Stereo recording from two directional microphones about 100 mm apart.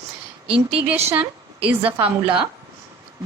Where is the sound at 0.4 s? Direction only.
15° right (ahead or behind).